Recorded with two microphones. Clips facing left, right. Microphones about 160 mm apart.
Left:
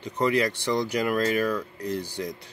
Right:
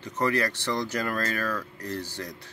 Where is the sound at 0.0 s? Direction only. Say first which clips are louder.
Left 3 dB; 15° left (ahead or behind).